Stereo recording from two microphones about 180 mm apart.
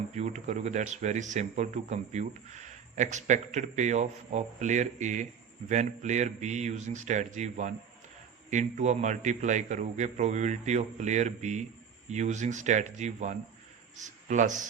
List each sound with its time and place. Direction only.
0.1 s a man's voice: 40° right (ahead or behind)